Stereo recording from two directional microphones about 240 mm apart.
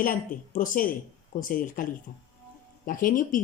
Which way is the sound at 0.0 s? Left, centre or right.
Left.